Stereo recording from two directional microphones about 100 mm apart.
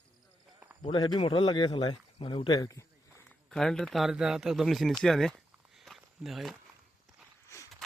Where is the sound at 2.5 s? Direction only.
35° left (ahead or behind).